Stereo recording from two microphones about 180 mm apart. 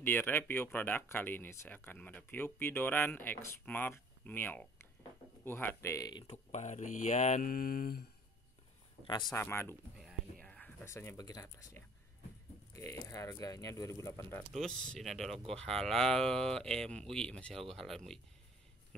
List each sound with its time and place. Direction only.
0.0 s speech: 10° left (ahead or behind)
6.2 s speech: 40° left (ahead or behind); by 8.0 s 55° left (ahead or behind)
9.0 s a man's voice: 25° left (ahead or behind)
9.4 s speech: 15° left (ahead or behind)
14.5 s speech: centre (ahead or behind)